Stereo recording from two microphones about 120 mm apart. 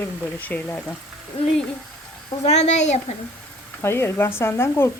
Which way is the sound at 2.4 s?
75° left (ahead or behind).